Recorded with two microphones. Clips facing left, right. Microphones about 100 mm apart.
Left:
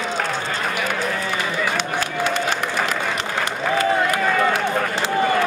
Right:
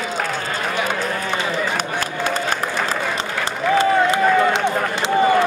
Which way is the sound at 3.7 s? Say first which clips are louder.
Right 4 dB; 25° right (ahead or behind).